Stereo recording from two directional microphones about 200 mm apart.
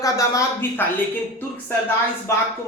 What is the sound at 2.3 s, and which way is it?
Speech, 15° left (ahead or behind).